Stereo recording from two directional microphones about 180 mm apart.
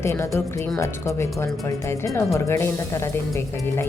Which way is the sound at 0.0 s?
15° left (ahead or behind).